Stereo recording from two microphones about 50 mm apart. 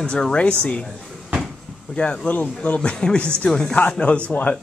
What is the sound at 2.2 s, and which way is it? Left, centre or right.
Speech, left.